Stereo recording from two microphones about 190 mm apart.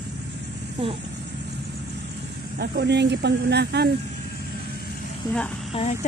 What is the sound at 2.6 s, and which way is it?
Speech, 60° right (ahead or behind).